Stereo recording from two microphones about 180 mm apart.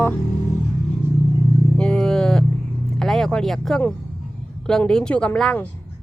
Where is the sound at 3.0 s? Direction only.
Centre (ahead or behind).